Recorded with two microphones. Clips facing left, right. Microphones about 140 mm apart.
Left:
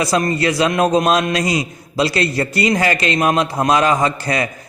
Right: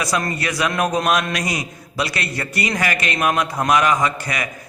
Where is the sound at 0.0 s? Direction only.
25° left (ahead or behind).